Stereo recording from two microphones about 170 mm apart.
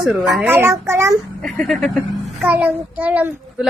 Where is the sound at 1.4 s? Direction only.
Centre (ahead or behind).